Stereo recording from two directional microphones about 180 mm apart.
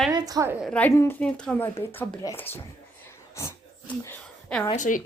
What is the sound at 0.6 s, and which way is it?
A woman's voice, 5° left (ahead or behind).